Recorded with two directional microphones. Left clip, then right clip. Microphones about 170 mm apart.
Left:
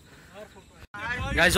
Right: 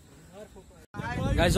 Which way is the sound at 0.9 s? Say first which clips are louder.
Left 3 dB; 30° right (ahead or behind).